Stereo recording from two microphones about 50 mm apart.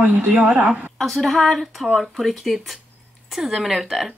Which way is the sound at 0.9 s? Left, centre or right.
Centre.